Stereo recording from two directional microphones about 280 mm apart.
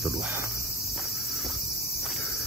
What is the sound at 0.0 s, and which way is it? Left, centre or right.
Cricket, centre.